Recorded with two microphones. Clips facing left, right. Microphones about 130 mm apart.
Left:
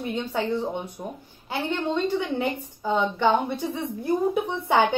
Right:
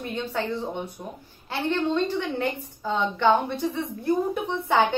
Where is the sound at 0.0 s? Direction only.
15° left (ahead or behind).